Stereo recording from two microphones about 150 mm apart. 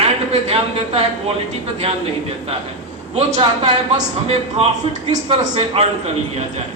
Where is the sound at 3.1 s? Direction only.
40° right (ahead or behind).